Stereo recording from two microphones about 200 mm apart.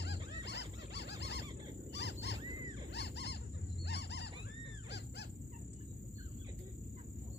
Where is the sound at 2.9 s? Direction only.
60° left (ahead or behind).